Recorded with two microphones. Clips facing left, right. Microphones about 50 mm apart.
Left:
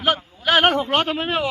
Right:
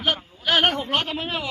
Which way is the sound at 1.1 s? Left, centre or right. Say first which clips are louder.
Left 6 dB; left.